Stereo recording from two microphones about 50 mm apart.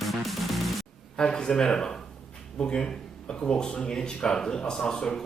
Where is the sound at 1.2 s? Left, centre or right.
Centre.